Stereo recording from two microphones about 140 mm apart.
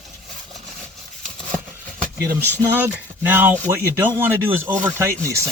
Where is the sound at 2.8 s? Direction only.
15° right (ahead or behind).